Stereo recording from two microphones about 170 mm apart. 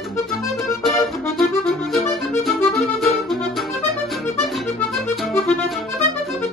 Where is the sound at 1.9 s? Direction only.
Centre (ahead or behind).